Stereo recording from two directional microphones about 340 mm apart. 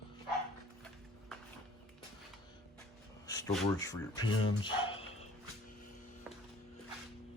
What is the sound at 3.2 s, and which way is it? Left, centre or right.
Speech, centre.